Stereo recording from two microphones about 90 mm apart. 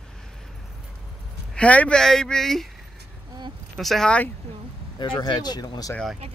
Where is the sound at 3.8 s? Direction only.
5° left (ahead or behind).